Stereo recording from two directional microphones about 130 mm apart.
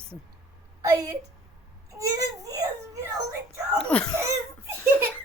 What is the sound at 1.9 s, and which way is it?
Baby cry, 25° right (ahead or behind).